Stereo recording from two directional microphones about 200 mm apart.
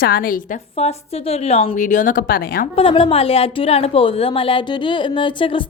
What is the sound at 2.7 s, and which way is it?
A woman's voice, 25° left (ahead or behind).